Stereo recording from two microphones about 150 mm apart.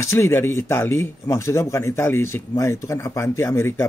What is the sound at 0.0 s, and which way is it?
Speech, 20° left (ahead or behind).